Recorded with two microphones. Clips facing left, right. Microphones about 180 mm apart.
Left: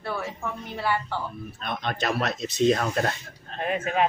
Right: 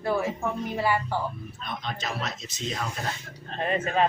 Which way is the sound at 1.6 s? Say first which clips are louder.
Left 6 dB; 65° left (ahead or behind).